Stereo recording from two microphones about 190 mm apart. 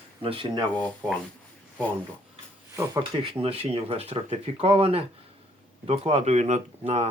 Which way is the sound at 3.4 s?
30° right (ahead or behind).